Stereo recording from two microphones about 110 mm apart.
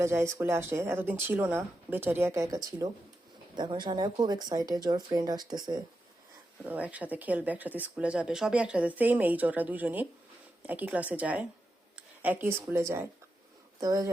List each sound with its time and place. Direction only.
0.0 s speech: 25° right (ahead or behind)
3.5 s speech: 45° right (ahead or behind)
6.7 s speech: 15° right (ahead or behind)
13.7 s speech: 35° right (ahead or behind)